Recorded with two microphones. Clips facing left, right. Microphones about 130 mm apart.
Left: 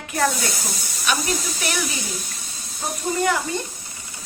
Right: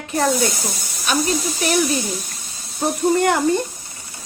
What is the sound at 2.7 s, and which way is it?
Speech, 65° right (ahead or behind).